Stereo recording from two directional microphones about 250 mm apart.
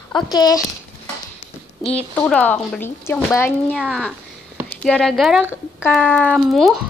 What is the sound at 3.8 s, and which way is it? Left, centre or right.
A woman's voice, centre.